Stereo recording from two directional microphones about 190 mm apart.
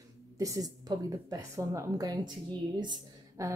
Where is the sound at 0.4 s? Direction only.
20° right (ahead or behind).